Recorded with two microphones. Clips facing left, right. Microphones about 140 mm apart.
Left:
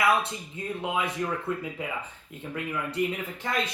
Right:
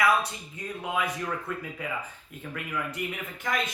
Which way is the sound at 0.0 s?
25° left (ahead or behind).